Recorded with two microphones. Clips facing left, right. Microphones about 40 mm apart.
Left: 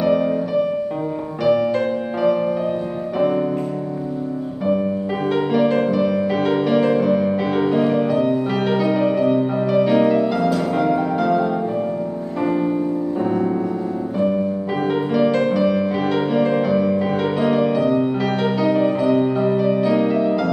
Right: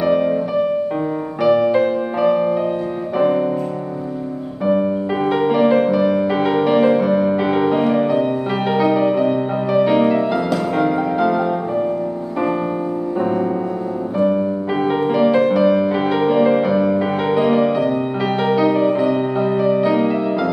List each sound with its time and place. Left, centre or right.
0.0 s music: centre
5.3 s music: centre
13.2 s music: centre